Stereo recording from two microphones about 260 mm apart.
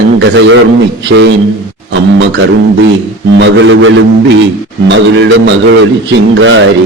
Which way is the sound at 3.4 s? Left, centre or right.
Right.